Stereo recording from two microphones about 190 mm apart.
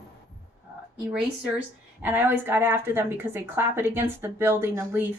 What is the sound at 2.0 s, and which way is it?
Speech, 10° right (ahead or behind).